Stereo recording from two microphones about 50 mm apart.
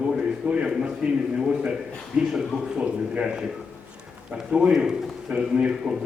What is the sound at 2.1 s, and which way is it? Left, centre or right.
A man's voice, right.